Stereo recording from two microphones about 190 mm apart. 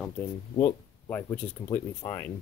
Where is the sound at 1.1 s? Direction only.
10° left (ahead or behind).